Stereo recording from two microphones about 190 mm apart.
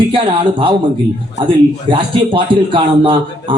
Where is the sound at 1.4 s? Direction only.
25° right (ahead or behind).